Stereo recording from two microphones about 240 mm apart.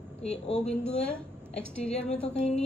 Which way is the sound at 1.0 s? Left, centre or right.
Left.